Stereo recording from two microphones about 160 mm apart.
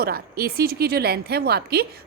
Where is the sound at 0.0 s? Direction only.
70° right (ahead or behind).